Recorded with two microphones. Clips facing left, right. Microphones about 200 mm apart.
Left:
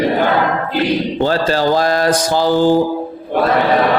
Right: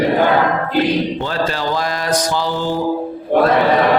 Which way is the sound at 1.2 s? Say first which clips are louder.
Left 5 dB; 35° left (ahead or behind).